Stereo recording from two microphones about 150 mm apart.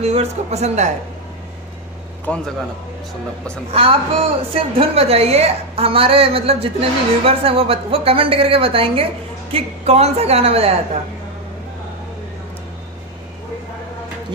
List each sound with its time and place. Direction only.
0.0 s a woman's voice: 45° right (ahead or behind)
2.2 s a man's voice: 5° left (ahead or behind)
3.7 s a woman's voice: 40° right (ahead or behind)